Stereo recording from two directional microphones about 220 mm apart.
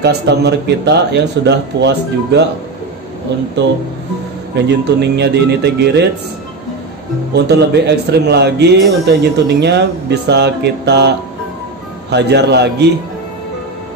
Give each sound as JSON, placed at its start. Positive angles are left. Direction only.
{"t": 0.0, "sound": "speech", "side_deg": -50}
{"t": 4.6, "sound": "speech", "side_deg": -50}
{"t": 7.3, "sound": "speech", "side_deg": -50}